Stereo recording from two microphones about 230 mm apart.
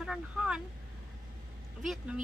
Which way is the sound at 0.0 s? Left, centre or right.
Centre.